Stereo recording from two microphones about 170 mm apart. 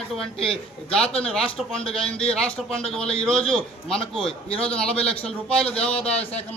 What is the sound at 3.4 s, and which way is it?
Speech, 35° left (ahead or behind).